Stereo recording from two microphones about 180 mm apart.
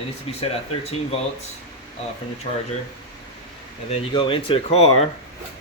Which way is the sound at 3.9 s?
30° left (ahead or behind).